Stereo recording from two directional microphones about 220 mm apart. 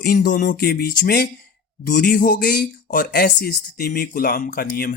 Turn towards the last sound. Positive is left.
turn(degrees=40)  # may be behind; listen again after turning